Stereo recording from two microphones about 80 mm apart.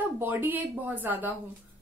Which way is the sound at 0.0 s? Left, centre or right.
Right.